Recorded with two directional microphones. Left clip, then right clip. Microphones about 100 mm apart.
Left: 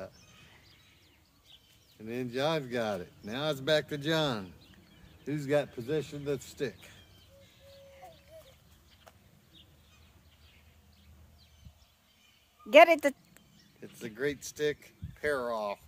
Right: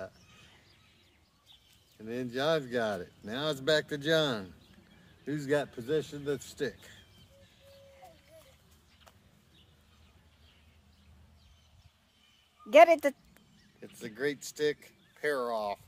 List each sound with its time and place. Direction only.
2.0 s speech: centre (ahead or behind)
12.6 s speech: 25° left (ahead or behind)
14.0 s speech: 5° right (ahead or behind)